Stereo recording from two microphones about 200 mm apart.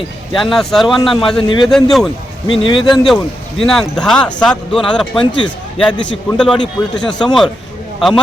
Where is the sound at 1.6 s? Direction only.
Centre (ahead or behind).